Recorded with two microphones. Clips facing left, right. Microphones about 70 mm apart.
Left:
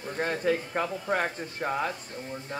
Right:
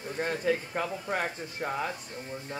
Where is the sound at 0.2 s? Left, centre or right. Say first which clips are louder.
Left 2 dB; left.